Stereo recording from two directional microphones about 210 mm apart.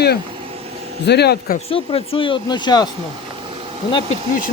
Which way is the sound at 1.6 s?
25° left (ahead or behind).